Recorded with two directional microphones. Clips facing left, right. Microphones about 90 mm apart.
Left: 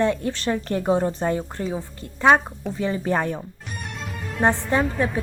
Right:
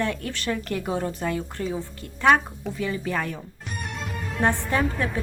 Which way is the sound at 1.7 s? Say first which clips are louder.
Left 1 dB; 20° left (ahead or behind).